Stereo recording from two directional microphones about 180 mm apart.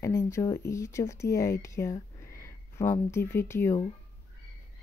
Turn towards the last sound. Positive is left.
turn(degrees=15)  # may be behind; listen again after turning